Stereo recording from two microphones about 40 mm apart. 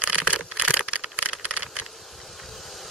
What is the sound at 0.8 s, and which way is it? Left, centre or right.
Vehicle, right.